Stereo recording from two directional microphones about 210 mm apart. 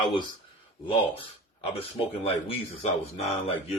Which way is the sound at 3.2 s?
30° left (ahead or behind).